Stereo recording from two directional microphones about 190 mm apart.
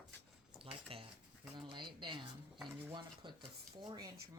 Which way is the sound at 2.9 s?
25° right (ahead or behind).